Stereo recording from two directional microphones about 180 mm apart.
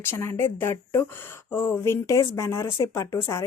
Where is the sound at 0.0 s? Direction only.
15° left (ahead or behind).